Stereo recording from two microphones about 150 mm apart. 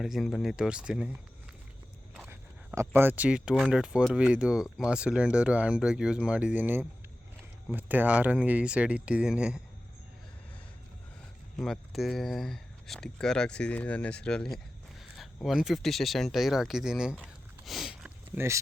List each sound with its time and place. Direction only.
0.0 s speech: centre (ahead or behind)
2.3 s speech: 15° right (ahead or behind)
11.5 s speech: 5° left (ahead or behind)
17.7 s a sound: centre (ahead or behind)
18.3 s speech: 20° right (ahead or behind)